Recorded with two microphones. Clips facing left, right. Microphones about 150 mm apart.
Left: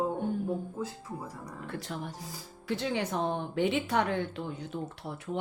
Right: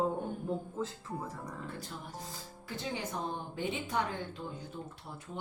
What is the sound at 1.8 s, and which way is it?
Speech, 75° left (ahead or behind).